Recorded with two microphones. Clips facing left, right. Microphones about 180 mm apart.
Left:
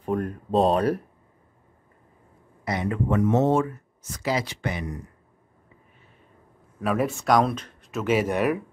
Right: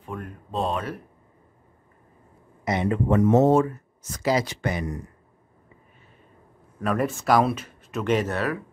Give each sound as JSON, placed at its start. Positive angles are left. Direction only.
{"t": 0.0, "sound": "speech", "side_deg": 40}
{"t": 2.6, "sound": "speech", "side_deg": -25}
{"t": 6.8, "sound": "speech", "side_deg": 0}